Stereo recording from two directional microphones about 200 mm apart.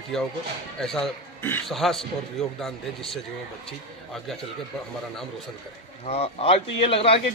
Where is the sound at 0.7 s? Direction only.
Centre (ahead or behind).